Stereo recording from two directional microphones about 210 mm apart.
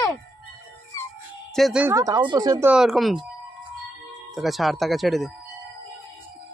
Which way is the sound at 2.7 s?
Centre (ahead or behind).